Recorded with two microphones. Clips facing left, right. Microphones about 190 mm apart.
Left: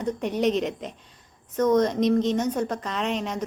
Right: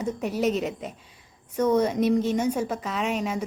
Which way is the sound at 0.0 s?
5° right (ahead or behind).